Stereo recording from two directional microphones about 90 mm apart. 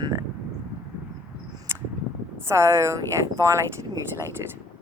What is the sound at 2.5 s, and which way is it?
Speech, 30° right (ahead or behind).